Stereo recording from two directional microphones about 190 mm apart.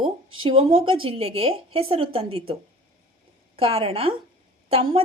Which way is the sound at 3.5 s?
30° right (ahead or behind).